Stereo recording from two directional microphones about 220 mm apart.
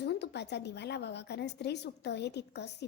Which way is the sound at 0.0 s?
50° left (ahead or behind).